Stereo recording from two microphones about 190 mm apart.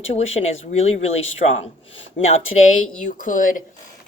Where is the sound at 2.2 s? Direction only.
35° left (ahead or behind).